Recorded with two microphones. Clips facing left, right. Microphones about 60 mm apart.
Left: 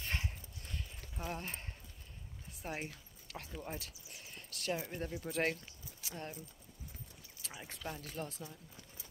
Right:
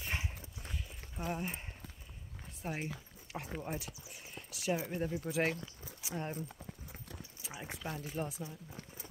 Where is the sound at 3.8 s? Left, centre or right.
Centre.